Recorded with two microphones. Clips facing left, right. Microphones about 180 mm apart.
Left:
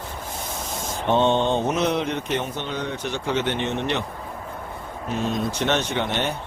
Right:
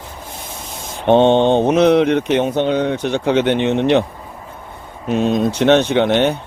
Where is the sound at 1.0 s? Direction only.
65° right (ahead or behind).